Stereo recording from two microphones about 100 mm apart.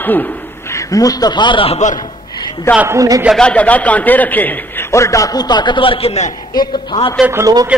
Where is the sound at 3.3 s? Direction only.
10° left (ahead or behind).